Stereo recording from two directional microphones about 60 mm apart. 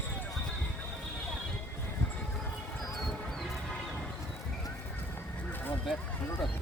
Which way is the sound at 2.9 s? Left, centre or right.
Centre.